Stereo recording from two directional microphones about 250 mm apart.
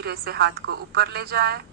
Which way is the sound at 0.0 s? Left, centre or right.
Right.